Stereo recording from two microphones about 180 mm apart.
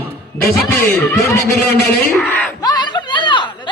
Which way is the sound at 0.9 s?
15° left (ahead or behind).